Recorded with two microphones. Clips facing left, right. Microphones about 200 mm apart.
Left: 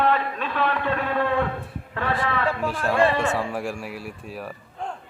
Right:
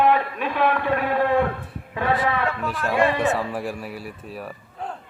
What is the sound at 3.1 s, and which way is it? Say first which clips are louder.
Speech: right 2 dB; 20° right (ahead or behind).